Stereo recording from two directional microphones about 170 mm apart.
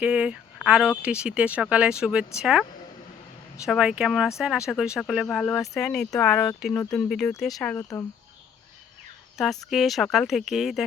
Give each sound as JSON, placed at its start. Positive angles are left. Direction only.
{"t": 0.0, "sound": "speech", "side_deg": -5}
{"t": 3.7, "sound": "speech", "side_deg": -5}
{"t": 7.8, "sound": "speech", "side_deg": 15}
{"t": 9.6, "sound": "speech", "side_deg": 0}